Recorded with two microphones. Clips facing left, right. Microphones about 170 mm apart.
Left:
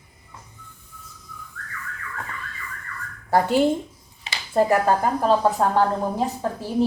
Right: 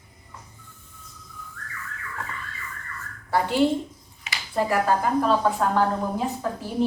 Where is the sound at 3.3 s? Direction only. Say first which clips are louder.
Left 3 dB; 45° left (ahead or behind).